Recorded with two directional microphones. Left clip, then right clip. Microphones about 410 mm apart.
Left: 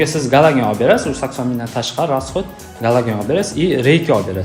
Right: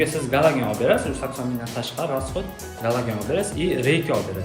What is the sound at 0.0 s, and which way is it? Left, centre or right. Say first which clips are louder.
Speech: left 7 dB; centre.